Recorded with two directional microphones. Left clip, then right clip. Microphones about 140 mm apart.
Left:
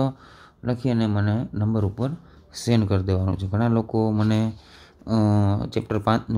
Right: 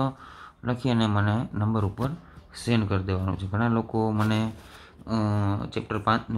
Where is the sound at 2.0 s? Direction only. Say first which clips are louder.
Left 2 dB; 35° left (ahead or behind).